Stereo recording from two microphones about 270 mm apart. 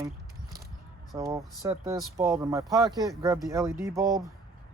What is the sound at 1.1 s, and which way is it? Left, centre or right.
Speech, centre.